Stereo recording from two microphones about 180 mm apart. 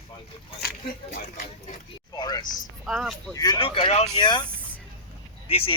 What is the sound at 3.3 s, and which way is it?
Speech, 25° left (ahead or behind).